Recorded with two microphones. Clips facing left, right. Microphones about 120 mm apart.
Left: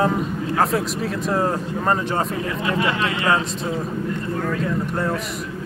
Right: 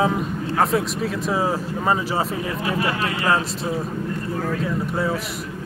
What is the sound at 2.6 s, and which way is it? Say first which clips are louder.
Speech: left 2 dB; 30° right (ahead or behind).